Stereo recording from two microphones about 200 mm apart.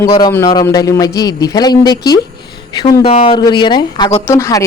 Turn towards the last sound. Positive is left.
turn(degrees=15)  # may be behind; listen again after turning